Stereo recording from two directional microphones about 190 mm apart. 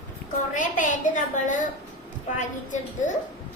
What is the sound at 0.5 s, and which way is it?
A woman's voice, 40° left (ahead or behind).